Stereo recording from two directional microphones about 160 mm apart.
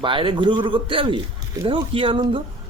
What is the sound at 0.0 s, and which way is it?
A man's voice, 30° right (ahead or behind).